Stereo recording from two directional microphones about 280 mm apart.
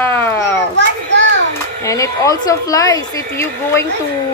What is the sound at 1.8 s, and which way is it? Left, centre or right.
A woman's voice, centre.